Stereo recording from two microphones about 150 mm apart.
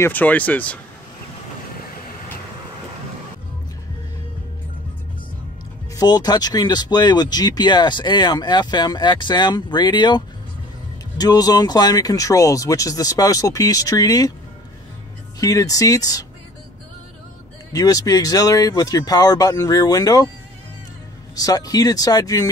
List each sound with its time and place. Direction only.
0.0 s speech: 10° left (ahead or behind)
5.9 s speech: 25° left (ahead or behind)
15.4 s speech: 20° left (ahead or behind)
17.7 s speech: 25° left (ahead or behind)
21.4 s speech: 25° left (ahead or behind)